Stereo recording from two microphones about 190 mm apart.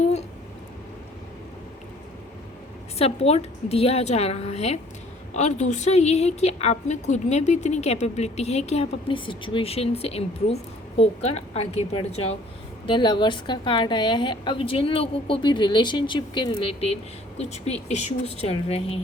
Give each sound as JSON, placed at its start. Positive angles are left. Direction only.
{"t": 3.0, "sound": "a woman's voice", "side_deg": 30}